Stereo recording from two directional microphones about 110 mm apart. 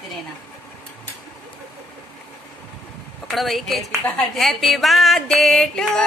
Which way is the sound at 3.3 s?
Centre (ahead or behind).